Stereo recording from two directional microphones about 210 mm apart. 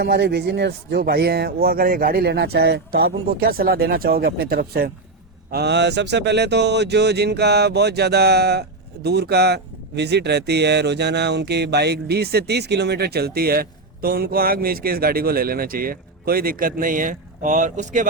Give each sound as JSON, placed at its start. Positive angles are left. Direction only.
{"t": 0.0, "sound": "speech", "side_deg": -50}